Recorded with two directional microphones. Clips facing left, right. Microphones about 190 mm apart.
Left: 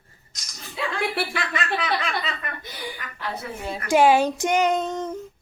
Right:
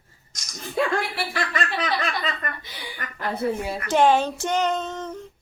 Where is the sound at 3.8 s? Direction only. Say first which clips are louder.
Left 2 dB; 10° left (ahead or behind).